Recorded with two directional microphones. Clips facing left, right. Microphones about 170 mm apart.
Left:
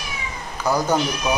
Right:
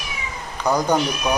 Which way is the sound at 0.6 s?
15° right (ahead or behind).